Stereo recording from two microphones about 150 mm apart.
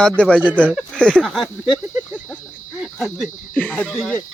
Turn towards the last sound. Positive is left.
turn(degrees=10)  # may be behind; listen again after turning